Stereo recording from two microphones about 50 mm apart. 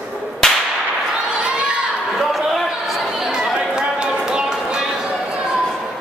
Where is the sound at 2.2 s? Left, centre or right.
Centre.